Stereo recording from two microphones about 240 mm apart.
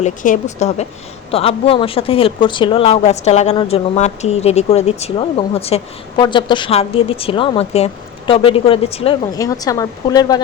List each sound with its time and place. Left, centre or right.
0.0 s speech: left; by 10.4 s centre